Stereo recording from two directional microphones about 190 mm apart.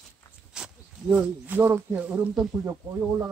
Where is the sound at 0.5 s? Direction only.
5° right (ahead or behind).